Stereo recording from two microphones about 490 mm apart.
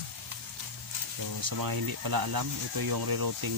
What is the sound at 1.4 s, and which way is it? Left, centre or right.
Speech, right.